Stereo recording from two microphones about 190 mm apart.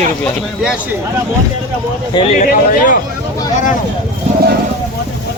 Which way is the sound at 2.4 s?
45° left (ahead or behind).